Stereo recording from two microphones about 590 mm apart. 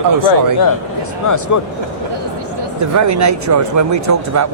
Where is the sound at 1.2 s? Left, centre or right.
Left.